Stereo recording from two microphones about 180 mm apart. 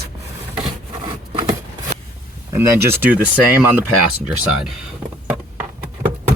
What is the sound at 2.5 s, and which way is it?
Speech, 15° right (ahead or behind).